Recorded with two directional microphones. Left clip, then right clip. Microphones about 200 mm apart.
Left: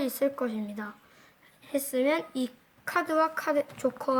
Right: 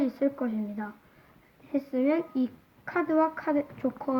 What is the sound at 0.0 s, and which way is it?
Speech, 45° left (ahead or behind).